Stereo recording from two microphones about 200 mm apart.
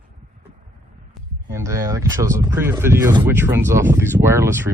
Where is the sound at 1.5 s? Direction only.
15° right (ahead or behind).